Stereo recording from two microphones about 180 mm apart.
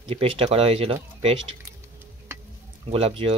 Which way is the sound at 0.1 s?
35° right (ahead or behind).